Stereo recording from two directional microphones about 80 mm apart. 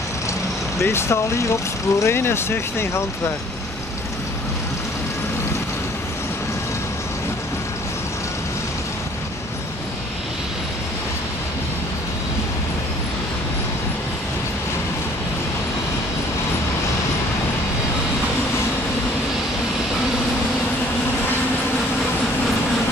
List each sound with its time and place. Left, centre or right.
0.7 s speech: left